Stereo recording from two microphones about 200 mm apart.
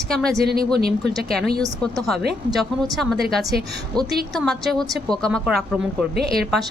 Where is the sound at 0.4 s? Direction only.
50° right (ahead or behind).